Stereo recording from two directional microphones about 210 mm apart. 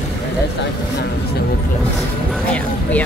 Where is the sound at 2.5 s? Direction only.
5° left (ahead or behind).